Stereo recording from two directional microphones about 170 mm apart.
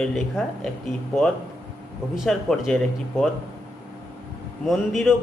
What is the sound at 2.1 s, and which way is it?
A man's voice, centre (ahead or behind).